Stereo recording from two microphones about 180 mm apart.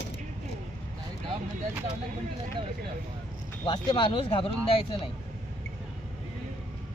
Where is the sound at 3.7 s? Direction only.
25° left (ahead or behind).